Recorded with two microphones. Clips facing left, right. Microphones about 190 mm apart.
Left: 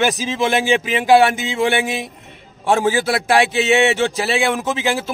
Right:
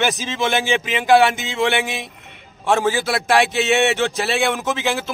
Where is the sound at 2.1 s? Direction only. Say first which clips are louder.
Left 3 dB; 30° left (ahead or behind).